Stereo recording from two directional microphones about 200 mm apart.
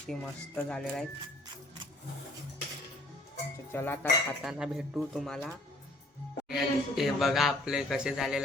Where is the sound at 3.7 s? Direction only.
10° left (ahead or behind).